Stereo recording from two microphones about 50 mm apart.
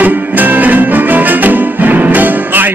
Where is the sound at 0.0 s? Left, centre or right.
Right.